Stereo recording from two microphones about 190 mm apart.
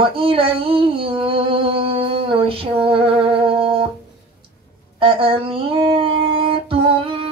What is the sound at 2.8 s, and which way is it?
Humming, 30° right (ahead or behind).